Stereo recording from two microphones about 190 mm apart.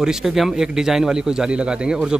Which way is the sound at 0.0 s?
Centre (ahead or behind).